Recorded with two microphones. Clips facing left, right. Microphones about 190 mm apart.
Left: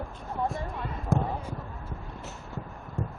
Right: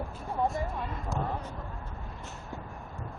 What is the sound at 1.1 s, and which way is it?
Basketball bounce, 55° left (ahead or behind).